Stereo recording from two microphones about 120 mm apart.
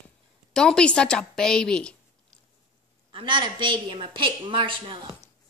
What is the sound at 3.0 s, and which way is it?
A woman's voice, 40° right (ahead or behind).